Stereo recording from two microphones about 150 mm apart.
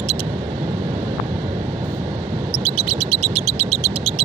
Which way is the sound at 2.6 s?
45° right (ahead or behind).